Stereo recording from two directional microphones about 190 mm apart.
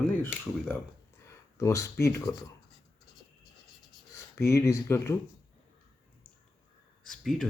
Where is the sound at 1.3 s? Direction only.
15° left (ahead or behind).